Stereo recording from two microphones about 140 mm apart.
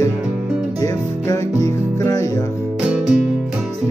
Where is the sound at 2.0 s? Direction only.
20° left (ahead or behind).